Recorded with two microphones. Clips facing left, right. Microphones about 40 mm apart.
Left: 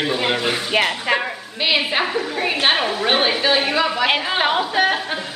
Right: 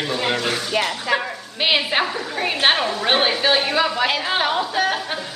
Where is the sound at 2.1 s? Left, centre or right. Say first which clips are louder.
Left 2 dB; centre.